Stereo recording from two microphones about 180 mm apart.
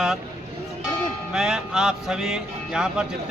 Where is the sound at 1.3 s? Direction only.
Centre (ahead or behind).